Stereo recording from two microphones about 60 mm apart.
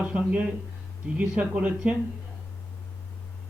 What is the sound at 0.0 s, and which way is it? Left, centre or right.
A man's voice, right.